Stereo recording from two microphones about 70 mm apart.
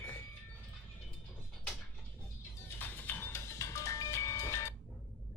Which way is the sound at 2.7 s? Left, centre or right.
Left.